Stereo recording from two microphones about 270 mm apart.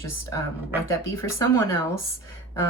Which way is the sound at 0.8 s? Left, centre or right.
Centre.